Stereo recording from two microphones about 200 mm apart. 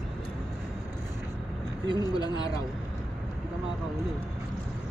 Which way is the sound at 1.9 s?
20° left (ahead or behind).